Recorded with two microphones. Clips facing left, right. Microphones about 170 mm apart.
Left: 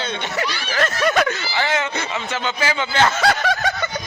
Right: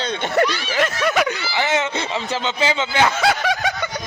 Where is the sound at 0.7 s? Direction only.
15° right (ahead or behind).